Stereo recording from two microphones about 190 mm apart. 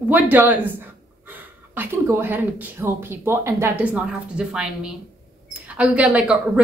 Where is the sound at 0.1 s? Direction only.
10° right (ahead or behind).